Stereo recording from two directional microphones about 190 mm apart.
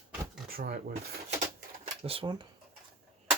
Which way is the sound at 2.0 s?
30° right (ahead or behind).